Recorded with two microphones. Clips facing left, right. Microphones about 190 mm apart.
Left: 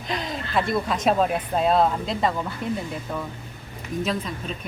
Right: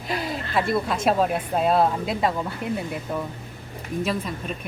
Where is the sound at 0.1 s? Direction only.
5° right (ahead or behind).